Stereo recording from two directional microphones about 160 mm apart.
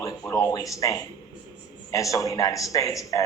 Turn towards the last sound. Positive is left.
turn(degrees=20)  # may be behind; listen again after turning